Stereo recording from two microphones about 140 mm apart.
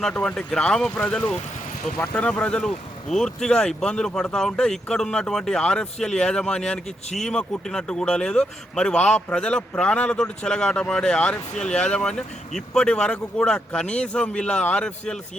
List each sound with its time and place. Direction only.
0.0 s a man's voice: 5° left (ahead or behind)